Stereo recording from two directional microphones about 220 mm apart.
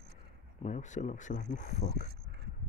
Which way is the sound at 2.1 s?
50° right (ahead or behind).